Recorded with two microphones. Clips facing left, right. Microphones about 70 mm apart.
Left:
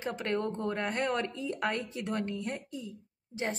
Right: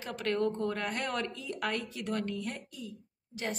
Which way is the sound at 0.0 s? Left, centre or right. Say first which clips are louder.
Right 1 dB; left.